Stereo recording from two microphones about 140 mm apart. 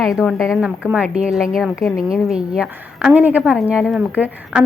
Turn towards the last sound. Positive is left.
turn(degrees=-10)  # may be behind; listen again after turning